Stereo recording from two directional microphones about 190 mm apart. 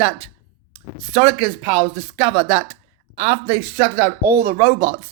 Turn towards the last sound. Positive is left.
turn(degrees=-15)  # may be behind; listen again after turning